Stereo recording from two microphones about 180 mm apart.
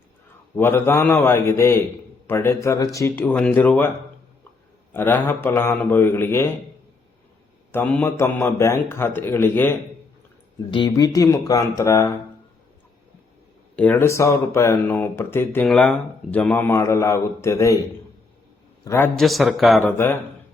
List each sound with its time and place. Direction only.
0.5 s speech: 10° left (ahead or behind)
4.9 s speech: 10° left (ahead or behind)
7.7 s speech: 10° left (ahead or behind)
10.7 s speech: 25° left (ahead or behind)
13.7 s speech: 10° left (ahead or behind)
18.9 s speech: 10° left (ahead or behind)
19.2 s a man's voice: centre (ahead or behind)